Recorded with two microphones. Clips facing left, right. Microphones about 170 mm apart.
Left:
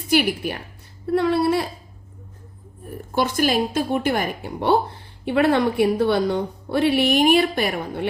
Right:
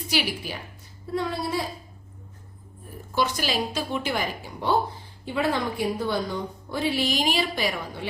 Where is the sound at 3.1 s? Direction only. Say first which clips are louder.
Left 6 dB; 55° left (ahead or behind).